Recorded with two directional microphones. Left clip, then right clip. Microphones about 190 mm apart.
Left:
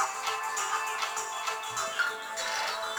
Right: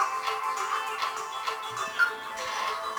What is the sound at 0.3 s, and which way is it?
Music, 5° right (ahead or behind).